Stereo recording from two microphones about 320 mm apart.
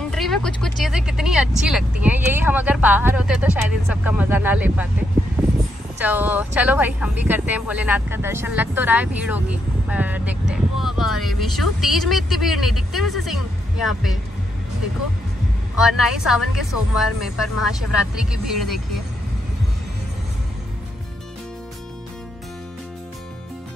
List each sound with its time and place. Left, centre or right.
0.1 s speech: centre
5.4 s a sound: centre
5.9 s speech: centre
15.8 s speech: centre